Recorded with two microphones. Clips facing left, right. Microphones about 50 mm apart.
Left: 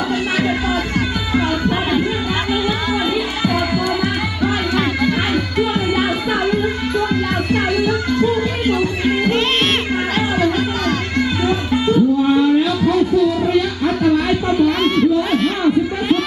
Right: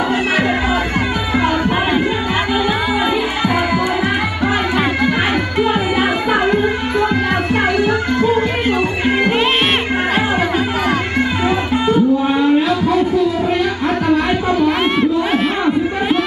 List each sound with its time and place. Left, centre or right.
1.4 s music: centre
7.1 s music: centre
11.4 s music: centre
13.5 s crowd: centre